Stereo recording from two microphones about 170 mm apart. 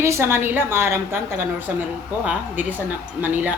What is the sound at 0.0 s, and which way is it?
A woman's voice, 15° right (ahead or behind).